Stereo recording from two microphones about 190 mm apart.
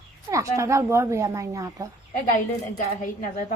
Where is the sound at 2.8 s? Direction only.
45° left (ahead or behind).